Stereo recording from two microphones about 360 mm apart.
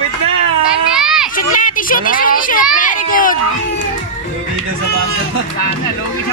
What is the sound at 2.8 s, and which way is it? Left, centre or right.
Speech, left.